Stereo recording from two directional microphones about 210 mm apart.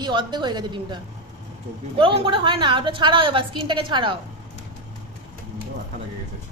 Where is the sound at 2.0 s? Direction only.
25° right (ahead or behind).